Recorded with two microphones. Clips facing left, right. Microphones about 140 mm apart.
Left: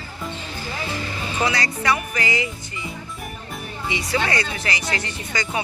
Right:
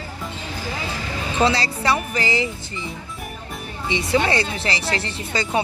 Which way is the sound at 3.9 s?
25° right (ahead or behind).